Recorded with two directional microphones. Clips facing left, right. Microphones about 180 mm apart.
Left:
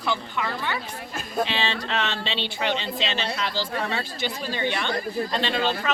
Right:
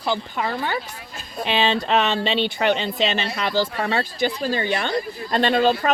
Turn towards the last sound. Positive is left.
turn(degrees=-50)  # may be behind; listen again after turning